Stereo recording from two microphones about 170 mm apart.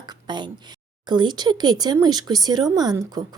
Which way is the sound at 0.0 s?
25° right (ahead or behind).